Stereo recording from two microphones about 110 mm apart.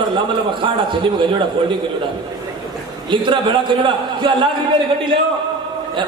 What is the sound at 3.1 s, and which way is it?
A man's voice, 45° right (ahead or behind).